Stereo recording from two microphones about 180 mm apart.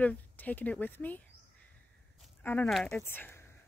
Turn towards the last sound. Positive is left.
turn(degrees=10)  # may be behind; listen again after turning